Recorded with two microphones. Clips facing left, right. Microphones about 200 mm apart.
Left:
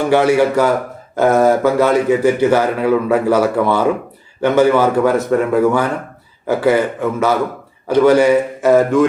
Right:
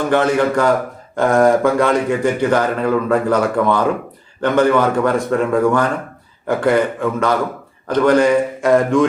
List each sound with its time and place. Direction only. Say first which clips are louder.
0.1 s a man's voice: left 3 dB; 10° left (ahead or behind)